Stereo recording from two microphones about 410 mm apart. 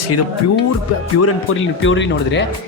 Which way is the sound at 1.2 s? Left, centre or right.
Left.